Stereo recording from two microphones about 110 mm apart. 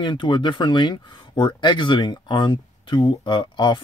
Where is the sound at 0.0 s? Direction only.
45° left (ahead or behind).